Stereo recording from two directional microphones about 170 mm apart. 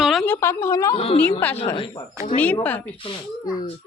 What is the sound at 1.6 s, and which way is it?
Speech, 35° left (ahead or behind).